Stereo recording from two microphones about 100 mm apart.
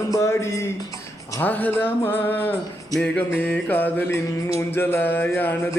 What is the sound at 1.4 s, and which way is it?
Speech, 15° left (ahead or behind).